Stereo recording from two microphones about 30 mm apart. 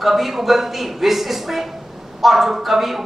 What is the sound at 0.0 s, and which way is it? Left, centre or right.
A woman's voice, centre.